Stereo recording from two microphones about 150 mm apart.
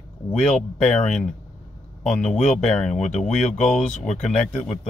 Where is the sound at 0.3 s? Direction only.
5° left (ahead or behind).